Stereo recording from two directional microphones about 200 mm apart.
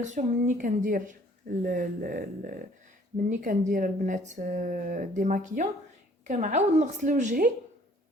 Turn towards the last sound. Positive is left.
turn(degrees=-40)  # may be behind; listen again after turning